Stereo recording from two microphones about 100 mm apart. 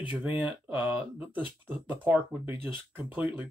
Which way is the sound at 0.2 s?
15° right (ahead or behind).